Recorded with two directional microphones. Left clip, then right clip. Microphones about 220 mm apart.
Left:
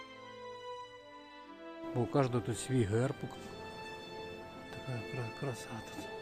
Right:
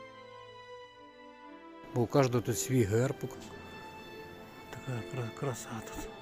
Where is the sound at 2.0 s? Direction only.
5° right (ahead or behind).